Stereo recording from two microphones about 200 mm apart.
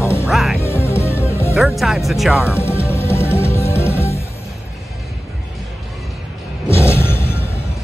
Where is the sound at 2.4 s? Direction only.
10° left (ahead or behind).